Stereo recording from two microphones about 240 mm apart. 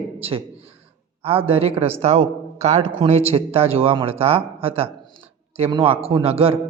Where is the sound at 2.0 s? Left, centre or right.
Right.